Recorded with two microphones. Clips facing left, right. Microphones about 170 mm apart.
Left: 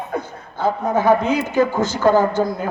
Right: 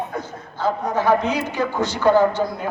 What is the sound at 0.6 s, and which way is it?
A man's voice, 50° left (ahead or behind).